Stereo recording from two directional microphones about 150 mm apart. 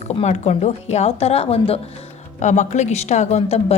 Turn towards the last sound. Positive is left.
turn(degrees=45)  # may be behind; listen again after turning